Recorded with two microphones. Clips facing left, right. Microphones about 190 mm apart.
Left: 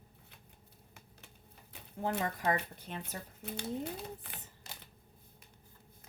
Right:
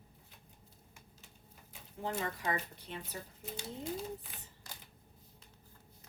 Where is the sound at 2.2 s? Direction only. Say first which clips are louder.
Left 4 dB; 45° left (ahead or behind).